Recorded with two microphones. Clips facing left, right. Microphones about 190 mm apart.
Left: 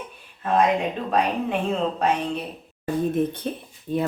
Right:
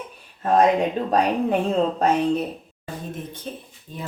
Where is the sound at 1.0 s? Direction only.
40° right (ahead or behind).